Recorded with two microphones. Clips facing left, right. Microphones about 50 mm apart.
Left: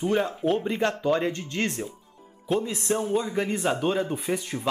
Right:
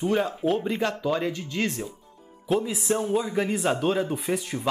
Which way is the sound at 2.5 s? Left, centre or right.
Centre.